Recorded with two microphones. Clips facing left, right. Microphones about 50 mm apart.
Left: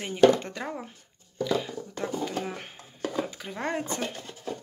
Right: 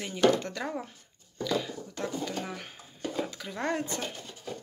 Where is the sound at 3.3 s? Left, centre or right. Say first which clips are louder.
Even; centre.